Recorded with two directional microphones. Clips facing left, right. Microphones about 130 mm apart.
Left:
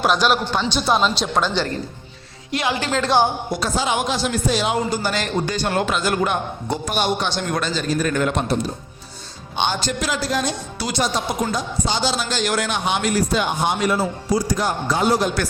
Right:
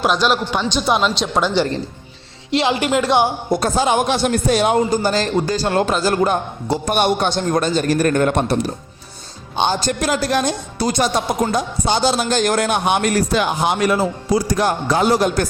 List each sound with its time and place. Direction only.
0.0 s speech: centre (ahead or behind)
2.5 s a woman's voice: 25° right (ahead or behind)
3.5 s a man's voice: 50° right (ahead or behind)
6.8 s a man's voice: 55° right (ahead or behind)
9.6 s speech: 40° right (ahead or behind); by 15.3 s 65° right (ahead or behind)